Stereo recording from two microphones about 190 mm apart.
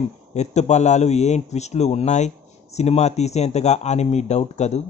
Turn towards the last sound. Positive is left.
turn(degrees=35)  # may be behind; listen again after turning